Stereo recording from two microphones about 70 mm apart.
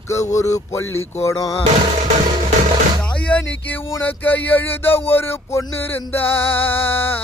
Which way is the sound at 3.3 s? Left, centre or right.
Centre.